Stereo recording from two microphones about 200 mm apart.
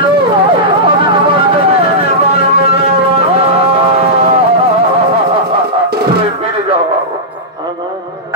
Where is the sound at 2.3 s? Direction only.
30° right (ahead or behind).